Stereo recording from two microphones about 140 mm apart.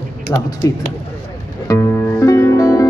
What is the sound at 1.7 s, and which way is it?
Music, 20° left (ahead or behind).